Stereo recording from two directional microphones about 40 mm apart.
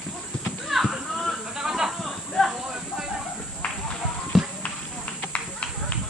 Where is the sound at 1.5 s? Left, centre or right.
Centre.